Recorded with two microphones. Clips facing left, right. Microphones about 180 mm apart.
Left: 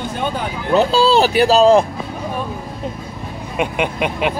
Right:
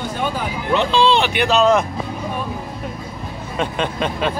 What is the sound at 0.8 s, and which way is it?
Speech, 40° left (ahead or behind).